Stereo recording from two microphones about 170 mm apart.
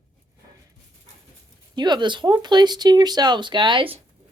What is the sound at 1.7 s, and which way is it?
Speech, 25° right (ahead or behind).